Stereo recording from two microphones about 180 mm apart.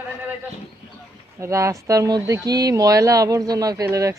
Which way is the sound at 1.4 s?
15° right (ahead or behind).